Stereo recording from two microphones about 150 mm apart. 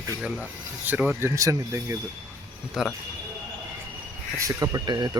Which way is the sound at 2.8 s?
5° right (ahead or behind).